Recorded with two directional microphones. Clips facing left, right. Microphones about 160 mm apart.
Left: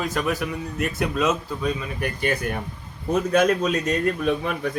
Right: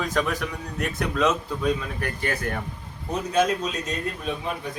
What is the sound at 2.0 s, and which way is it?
Speech, 15° left (ahead or behind).